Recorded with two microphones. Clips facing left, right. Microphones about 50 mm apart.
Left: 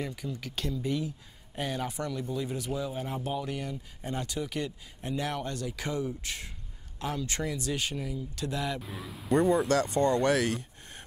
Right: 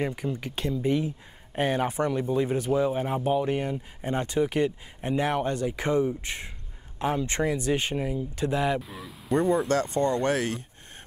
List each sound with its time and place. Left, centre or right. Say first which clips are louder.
0.0 s speech: right 7 dB; right
8.8 s speech: even; centre
9.7 s speech: right 1 dB; right